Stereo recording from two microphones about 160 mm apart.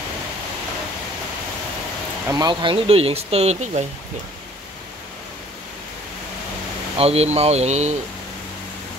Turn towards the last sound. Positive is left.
turn(degrees=-45)  # may be behind; listen again after turning